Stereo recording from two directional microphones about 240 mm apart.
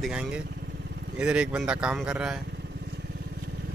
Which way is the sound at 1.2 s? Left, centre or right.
Centre.